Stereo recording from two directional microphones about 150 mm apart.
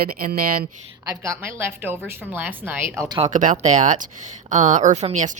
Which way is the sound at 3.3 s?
55° right (ahead or behind).